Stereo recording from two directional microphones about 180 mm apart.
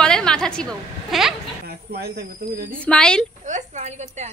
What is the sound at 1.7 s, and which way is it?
Speech, 60° right (ahead or behind).